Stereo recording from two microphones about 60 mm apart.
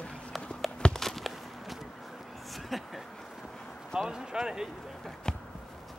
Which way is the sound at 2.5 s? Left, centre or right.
Centre.